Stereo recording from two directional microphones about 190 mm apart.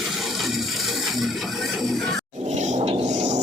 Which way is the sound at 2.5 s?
40° right (ahead or behind).